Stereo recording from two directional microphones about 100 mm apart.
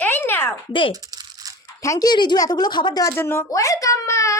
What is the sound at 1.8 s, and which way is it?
Speech, 30° left (ahead or behind).